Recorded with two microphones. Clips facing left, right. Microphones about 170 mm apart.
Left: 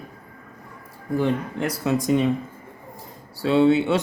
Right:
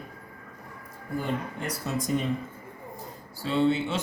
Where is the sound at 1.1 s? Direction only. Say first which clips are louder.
Left 8 dB; 90° left.